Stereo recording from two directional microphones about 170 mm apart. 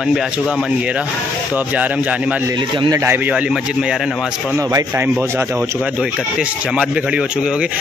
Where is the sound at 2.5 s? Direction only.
30° right (ahead or behind).